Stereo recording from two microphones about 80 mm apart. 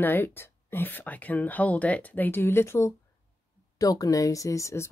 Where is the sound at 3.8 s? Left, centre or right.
Left.